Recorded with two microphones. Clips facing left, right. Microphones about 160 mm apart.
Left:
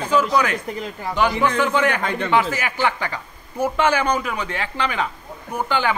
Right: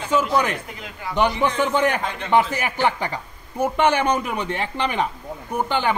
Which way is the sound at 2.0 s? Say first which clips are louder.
Left 5 dB; 60° left (ahead or behind).